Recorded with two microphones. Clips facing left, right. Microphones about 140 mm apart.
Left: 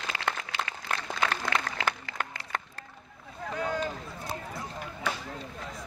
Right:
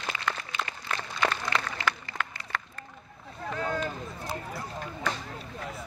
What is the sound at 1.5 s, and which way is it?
Applause, 50° left (ahead or behind).